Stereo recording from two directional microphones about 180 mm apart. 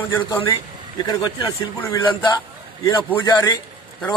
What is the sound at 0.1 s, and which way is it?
Speech, 20° left (ahead or behind).